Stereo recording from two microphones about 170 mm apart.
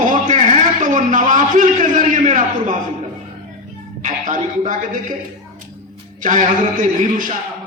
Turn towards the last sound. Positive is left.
turn(degrees=-50)  # may be behind; listen again after turning